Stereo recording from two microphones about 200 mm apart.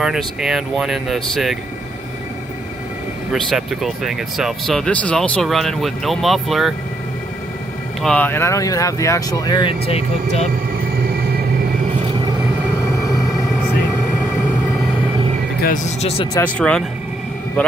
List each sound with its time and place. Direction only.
0.0 s speech: centre (ahead or behind)
3.4 s speech: centre (ahead or behind)
8.0 s speech: 5° left (ahead or behind); by 10.5 s 30° left (ahead or behind)
12.9 s music: 15° left (ahead or behind)
15.6 s speech: 35° left (ahead or behind)
16.5 s speech: 5° left (ahead or behind)